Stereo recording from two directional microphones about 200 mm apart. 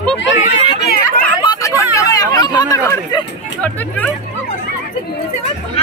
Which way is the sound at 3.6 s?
10° left (ahead or behind).